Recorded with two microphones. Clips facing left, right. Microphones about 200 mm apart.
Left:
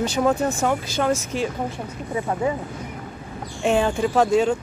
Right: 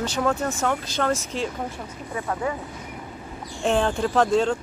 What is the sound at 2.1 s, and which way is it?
Speech, 20° left (ahead or behind).